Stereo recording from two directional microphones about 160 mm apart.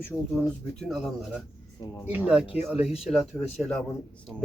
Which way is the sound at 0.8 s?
Centre (ahead or behind).